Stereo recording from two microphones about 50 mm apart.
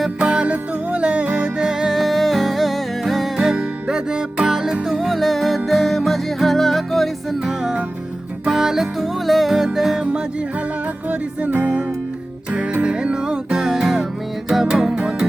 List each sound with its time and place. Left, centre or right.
0.2 s music: right; by 7.3 s centre
7.4 s music: centre
11.1 s music: right; by 15.3 s centre